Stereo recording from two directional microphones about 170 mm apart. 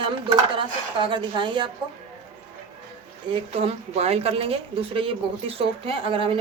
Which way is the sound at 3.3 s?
35° right (ahead or behind).